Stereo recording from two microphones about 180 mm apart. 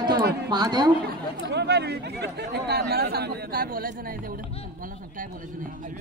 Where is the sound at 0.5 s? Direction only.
20° right (ahead or behind).